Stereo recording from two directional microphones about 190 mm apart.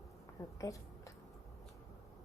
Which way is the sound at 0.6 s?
15° left (ahead or behind).